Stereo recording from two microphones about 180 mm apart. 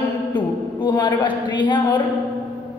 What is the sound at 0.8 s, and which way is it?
Speech, 25° left (ahead or behind).